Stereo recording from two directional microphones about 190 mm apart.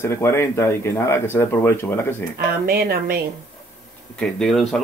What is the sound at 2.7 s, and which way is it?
Speech, 55° right (ahead or behind).